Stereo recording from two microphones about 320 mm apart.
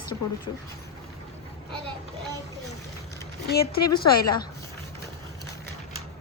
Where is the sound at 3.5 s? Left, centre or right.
Left.